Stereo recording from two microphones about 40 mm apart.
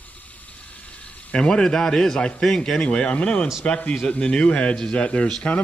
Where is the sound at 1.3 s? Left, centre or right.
Left.